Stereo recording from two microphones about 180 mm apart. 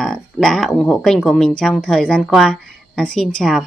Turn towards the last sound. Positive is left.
turn(degrees=0)  # may be behind; listen again after turning